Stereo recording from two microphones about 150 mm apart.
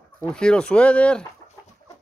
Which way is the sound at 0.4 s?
5° left (ahead or behind).